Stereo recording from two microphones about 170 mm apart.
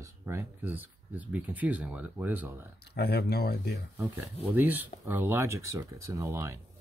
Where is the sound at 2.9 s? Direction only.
70° left (ahead or behind).